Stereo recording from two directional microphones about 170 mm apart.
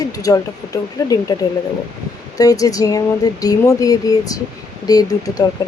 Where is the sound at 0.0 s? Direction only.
20° left (ahead or behind).